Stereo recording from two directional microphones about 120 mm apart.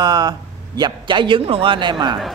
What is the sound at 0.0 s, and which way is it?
Speech, 35° right (ahead or behind).